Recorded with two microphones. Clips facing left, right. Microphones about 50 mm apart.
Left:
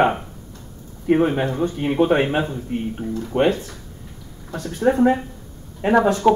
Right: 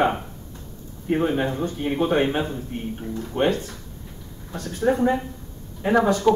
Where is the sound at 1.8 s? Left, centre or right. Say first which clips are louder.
Left 4 dB; left.